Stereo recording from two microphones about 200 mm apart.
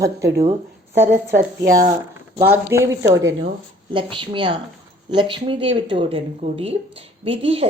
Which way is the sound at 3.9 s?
25° right (ahead or behind).